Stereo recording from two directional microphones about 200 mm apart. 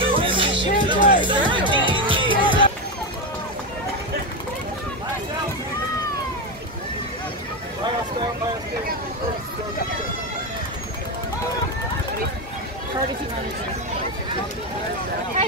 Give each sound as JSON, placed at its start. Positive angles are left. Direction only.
{"t": 0.0, "sound": "music", "side_deg": -25}